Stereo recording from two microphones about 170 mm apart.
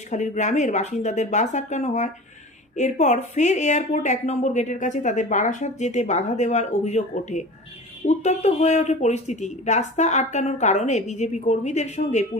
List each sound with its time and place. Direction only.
0.1 s speech: 45° left (ahead or behind)